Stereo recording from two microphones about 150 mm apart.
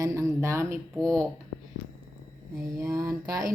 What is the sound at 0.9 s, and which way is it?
Speech, 5° left (ahead or behind).